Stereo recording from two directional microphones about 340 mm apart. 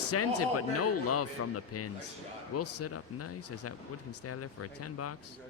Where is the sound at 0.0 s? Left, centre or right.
Left.